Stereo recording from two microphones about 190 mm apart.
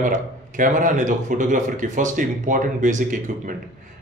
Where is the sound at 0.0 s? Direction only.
45° right (ahead or behind).